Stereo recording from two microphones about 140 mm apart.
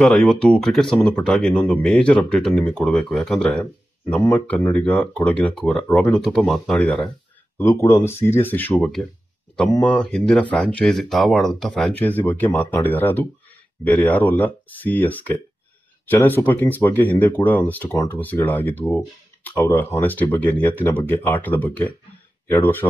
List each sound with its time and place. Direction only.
0.0 s speech: 5° left (ahead or behind)
7.5 s speech: 20° left (ahead or behind)
8.7 s speech: centre (ahead or behind)
9.7 s speech: 10° left (ahead or behind)